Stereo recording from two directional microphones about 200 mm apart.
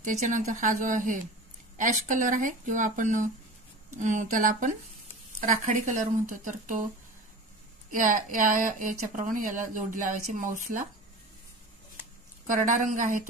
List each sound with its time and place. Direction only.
0.0 s speech: 40° right (ahead or behind)
7.9 s speech: 40° right (ahead or behind)
12.4 s speech: 40° right (ahead or behind)